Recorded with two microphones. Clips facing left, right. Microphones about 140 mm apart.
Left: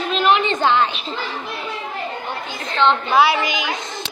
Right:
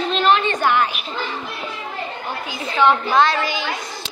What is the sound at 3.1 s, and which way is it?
Speech, 10° left (ahead or behind).